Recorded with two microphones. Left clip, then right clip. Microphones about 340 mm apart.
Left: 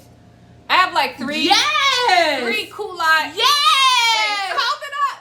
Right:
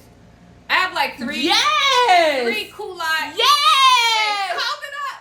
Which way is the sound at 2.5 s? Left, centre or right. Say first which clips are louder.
Left 3 dB; centre.